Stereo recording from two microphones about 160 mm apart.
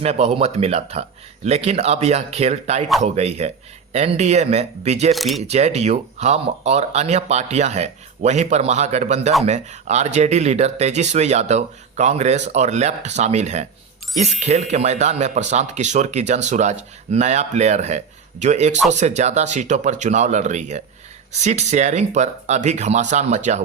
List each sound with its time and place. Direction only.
0.0 s speech: 40° right (ahead or behind)
5.1 s speech: centre (ahead or behind)
5.5 s speech: 45° right (ahead or behind)